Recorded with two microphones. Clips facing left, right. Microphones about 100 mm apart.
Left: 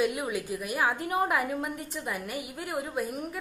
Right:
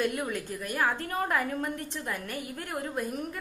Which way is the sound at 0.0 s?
10° left (ahead or behind).